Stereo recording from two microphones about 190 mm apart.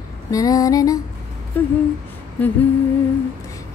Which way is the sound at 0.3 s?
20° left (ahead or behind).